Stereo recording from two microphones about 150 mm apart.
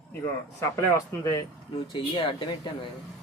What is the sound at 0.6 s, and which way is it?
Speech, 20° left (ahead or behind).